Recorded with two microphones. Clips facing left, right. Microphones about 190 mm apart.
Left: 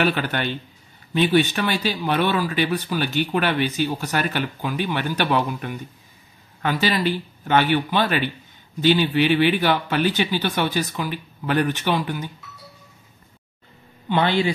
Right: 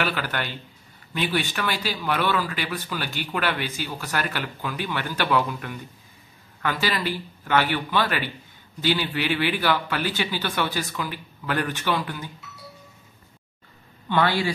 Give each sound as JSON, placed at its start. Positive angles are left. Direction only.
{"t": 0.0, "sound": "speech", "side_deg": 20}
{"t": 14.0, "sound": "speech", "side_deg": 20}